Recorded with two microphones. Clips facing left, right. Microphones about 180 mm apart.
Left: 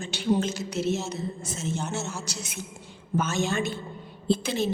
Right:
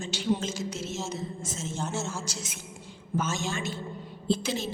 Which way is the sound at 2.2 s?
65° left (ahead or behind).